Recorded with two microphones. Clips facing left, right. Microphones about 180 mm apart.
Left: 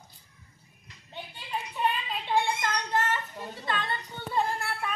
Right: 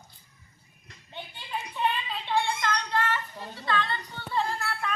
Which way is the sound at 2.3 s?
15° left (ahead or behind).